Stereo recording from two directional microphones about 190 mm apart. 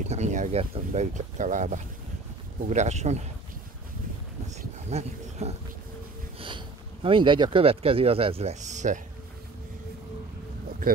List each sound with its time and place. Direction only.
0.0 s speech: 35° right (ahead or behind)
4.6 s a sound: 35° right (ahead or behind)
6.4 s speech: 25° right (ahead or behind)